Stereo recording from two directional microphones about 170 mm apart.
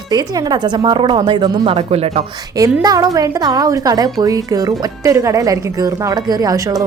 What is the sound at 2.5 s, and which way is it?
A woman's voice, 20° right (ahead or behind).